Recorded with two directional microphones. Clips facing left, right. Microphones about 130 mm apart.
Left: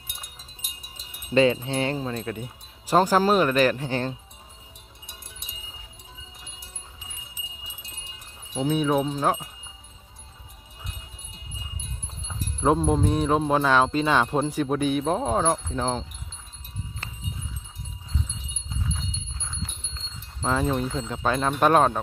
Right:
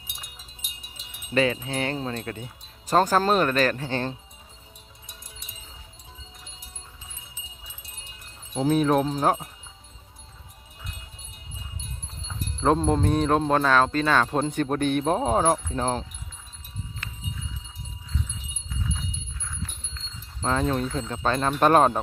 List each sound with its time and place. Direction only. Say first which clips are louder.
1.3 s speech: left 4 dB; 25° left (ahead or behind)
2.1 s speech: left 2 dB; 15° left (ahead or behind)
8.6 s speech: right 2 dB; centre (ahead or behind)
12.3 s speech: even; 5° left (ahead or behind)
14.3 s speech: left 1 dB; 5° left (ahead or behind)
17.0 s a sound: left 1 dB; 30° left (ahead or behind)
19.4 s a sound: even; 20° left (ahead or behind)
20.4 s speech: even; 5° left (ahead or behind)